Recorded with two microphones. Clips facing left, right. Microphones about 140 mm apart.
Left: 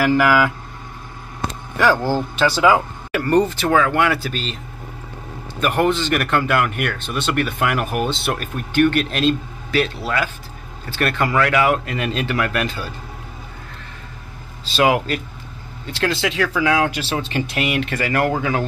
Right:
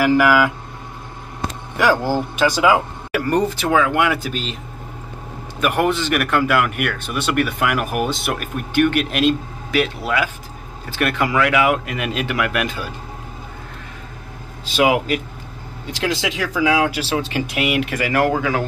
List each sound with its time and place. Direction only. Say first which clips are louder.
0.0 s speech: right 1 dB; 10° right (ahead or behind)
1.8 s speech: even; 15° right (ahead or behind)
5.6 s speech: even; 15° right (ahead or behind)
14.6 s speech: even; 15° right (ahead or behind)